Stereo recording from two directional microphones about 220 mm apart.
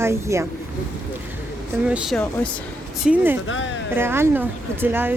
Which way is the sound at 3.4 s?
60° left (ahead or behind).